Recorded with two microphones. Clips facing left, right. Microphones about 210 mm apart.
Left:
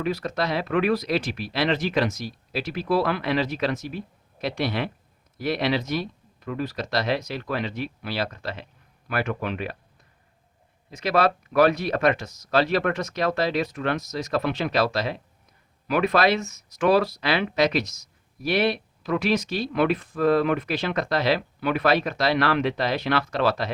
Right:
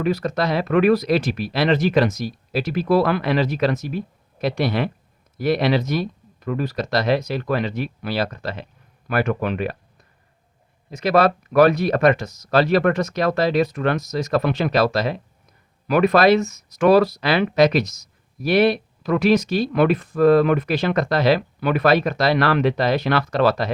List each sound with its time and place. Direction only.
0.0 s speech: 45° right (ahead or behind)
10.9 s speech: 45° right (ahead or behind)